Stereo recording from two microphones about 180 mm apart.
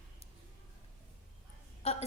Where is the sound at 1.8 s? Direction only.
35° left (ahead or behind).